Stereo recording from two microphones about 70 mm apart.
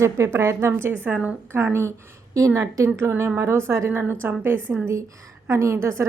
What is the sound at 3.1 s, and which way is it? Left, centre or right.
Speech, right.